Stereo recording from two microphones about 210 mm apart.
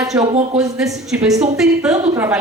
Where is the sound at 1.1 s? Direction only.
5° right (ahead or behind).